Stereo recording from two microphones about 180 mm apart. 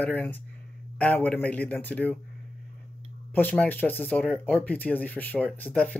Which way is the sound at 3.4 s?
10° left (ahead or behind).